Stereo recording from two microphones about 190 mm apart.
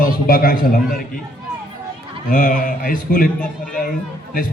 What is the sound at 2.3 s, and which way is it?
A man's voice, 45° left (ahead or behind).